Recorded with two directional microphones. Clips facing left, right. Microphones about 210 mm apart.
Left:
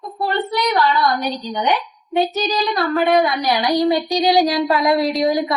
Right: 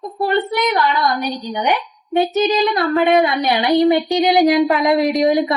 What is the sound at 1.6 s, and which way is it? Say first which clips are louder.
A woman's voice: right 1 dB; 20° right (ahead or behind).